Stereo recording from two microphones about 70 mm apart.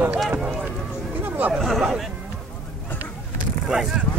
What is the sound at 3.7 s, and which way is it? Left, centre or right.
Speech, centre.